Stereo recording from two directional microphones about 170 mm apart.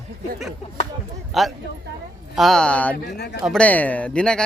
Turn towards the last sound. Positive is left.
turn(degrees=5)  # may be behind; listen again after turning